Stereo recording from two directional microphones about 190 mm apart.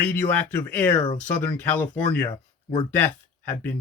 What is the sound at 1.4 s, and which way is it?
Speech, 10° left (ahead or behind).